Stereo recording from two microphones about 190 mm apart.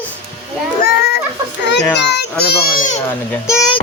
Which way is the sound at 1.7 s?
65° left (ahead or behind).